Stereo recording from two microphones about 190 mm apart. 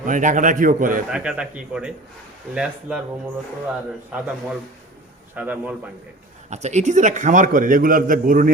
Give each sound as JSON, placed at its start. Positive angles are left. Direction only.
{"t": 0.0, "sound": "a man's voice", "side_deg": -45}
{"t": 1.1, "sound": "a man's voice", "side_deg": -5}
{"t": 3.7, "sound": "a man's voice", "side_deg": -5}
{"t": 6.5, "sound": "a man's voice", "side_deg": -35}